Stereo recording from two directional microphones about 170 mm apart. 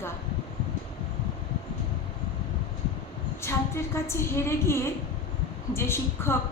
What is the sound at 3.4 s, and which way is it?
A woman's voice, 15° left (ahead or behind).